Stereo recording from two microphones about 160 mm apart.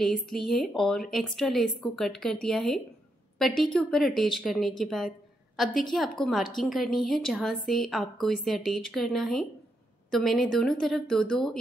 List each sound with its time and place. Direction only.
0.0 s a woman's voice: centre (ahead or behind)